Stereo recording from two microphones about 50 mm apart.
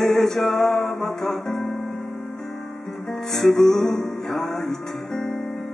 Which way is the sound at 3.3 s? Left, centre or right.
Centre.